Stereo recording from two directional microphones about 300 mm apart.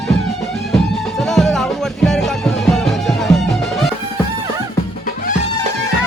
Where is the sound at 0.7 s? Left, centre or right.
Centre.